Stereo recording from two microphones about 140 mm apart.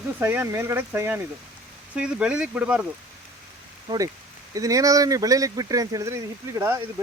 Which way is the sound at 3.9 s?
30° right (ahead or behind).